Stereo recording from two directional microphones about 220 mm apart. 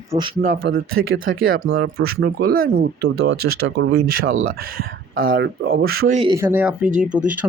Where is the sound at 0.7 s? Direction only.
65° right (ahead or behind).